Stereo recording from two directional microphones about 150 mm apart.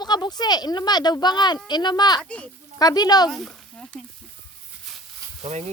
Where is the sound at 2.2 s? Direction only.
10° left (ahead or behind).